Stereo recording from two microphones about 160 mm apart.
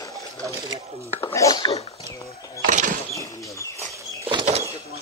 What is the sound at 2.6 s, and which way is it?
Vehicle, 55° right (ahead or behind).